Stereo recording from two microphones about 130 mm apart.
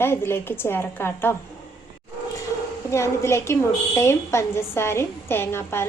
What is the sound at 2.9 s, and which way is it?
A woman's voice, 20° left (ahead or behind).